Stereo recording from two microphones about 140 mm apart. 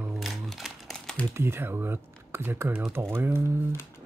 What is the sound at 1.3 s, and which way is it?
Speech, 15° right (ahead or behind).